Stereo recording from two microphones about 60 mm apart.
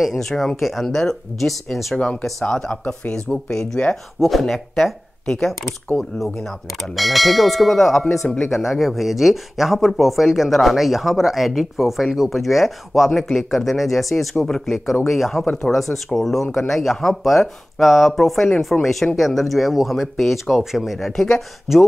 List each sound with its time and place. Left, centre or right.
0.0 s speech: centre
2.4 s speech: centre